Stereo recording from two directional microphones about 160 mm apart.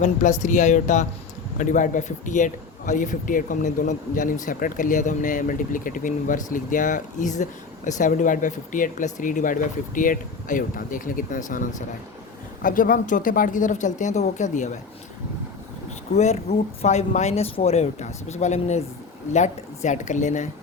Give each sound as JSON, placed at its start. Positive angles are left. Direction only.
{"t": 0.0, "sound": "a man's voice", "side_deg": 50}
{"t": 12.6, "sound": "a man's voice", "side_deg": 60}
{"t": 16.1, "sound": "a man's voice", "side_deg": 45}